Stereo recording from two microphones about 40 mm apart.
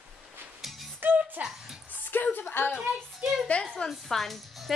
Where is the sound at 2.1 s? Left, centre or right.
Left.